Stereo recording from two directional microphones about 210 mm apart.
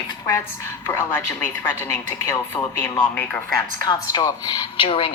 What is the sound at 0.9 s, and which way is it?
A woman's voice, 10° left (ahead or behind).